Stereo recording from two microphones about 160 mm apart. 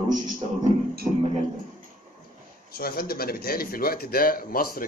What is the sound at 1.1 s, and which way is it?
Speech, 30° right (ahead or behind).